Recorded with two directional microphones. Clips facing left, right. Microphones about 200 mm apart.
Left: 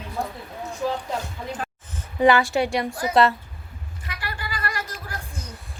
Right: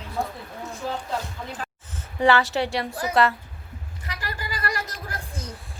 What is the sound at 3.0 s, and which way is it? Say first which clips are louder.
Speech: left 2 dB; 25° left (ahead or behind).